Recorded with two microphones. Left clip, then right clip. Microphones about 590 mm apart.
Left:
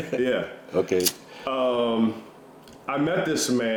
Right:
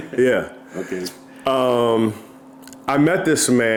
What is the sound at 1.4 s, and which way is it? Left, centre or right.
Speech, right.